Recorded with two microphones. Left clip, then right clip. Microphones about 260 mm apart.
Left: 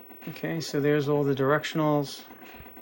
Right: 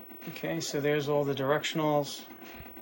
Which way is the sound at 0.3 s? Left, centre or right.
Centre.